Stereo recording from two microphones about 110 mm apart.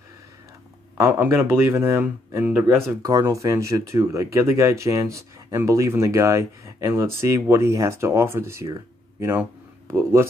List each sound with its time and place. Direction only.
0.9 s speech: 25° right (ahead or behind)
3.0 s speech: 30° right (ahead or behind)